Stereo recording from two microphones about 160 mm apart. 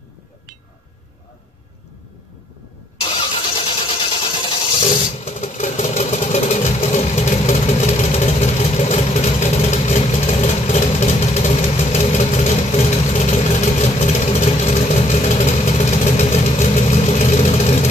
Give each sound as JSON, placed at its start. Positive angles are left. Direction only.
{"t": 3.0, "sound": "vehicle", "side_deg": 35}